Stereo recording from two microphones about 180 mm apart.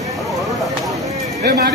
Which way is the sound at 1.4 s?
55° right (ahead or behind).